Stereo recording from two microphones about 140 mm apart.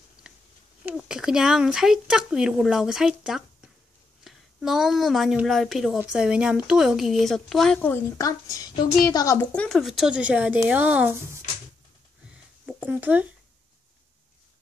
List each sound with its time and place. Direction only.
0.8 s speech: 5° right (ahead or behind)
7.9 s a woman's voice: 25° left (ahead or behind)
9.6 s speech: centre (ahead or behind); by 11.3 s 15° right (ahead or behind)
12.6 s speech: 10° right (ahead or behind)